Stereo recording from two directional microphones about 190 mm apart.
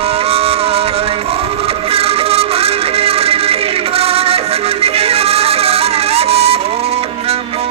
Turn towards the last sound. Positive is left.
turn(degrees=-30)  # may be behind; listen again after turning